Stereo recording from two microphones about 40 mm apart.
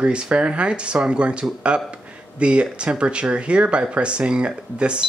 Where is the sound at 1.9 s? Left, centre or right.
Right.